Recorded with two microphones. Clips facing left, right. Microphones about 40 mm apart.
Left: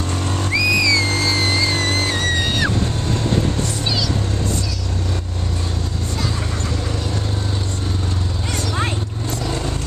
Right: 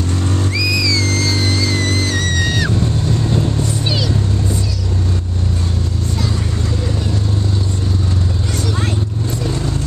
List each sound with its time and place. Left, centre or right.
0.6 s music: centre
1.9 s music: left